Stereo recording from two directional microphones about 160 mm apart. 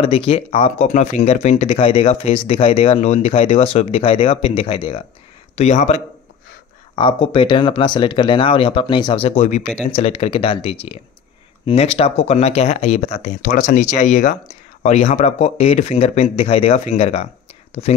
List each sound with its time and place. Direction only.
0.0 s speech: 35° left (ahead or behind)
5.6 s speech: 45° left (ahead or behind)
7.0 s speech: 30° left (ahead or behind)